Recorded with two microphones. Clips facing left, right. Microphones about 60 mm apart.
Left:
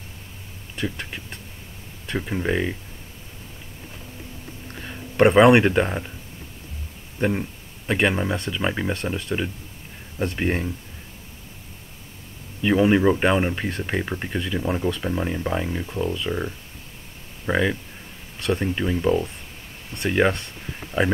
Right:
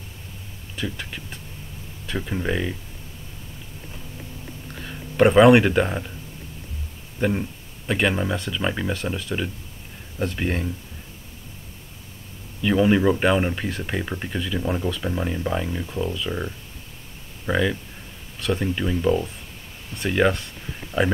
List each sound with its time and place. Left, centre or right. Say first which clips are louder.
2.1 s speech: left 2 dB; centre
4.9 s speech: even; centre
7.2 s a sound: even; centre
8.0 s speech: left 1 dB; centre
8.9 s speech: even; centre
10.1 s speech: left 1 dB; centre
12.6 s speech: left 1 dB; centre
20.9 s speech: even; left